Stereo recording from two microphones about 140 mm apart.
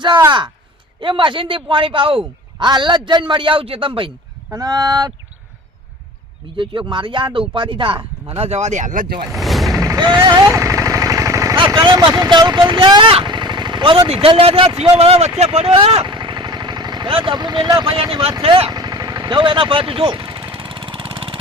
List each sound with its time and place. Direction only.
0.3 s a man's voice: 35° right (ahead or behind)
4.5 s speech: 25° right (ahead or behind)
6.6 s a man's voice: 35° right (ahead or behind)
8.4 s speech: 50° right (ahead or behind); by 9.1 s 70° right (ahead or behind)
9.3 s mechanisms: centre (ahead or behind)
9.7 s vehicle: 25° right (ahead or behind)
11.5 s speech: 35° right (ahead or behind)
16.1 s vehicle: 35° right (ahead or behind)